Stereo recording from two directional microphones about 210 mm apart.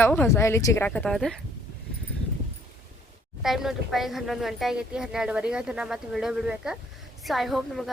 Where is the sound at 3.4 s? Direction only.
Centre (ahead or behind).